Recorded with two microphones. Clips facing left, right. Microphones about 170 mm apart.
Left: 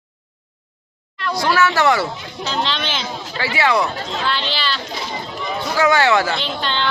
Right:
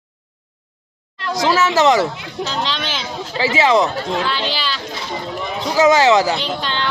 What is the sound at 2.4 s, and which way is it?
Speech, 5° right (ahead or behind).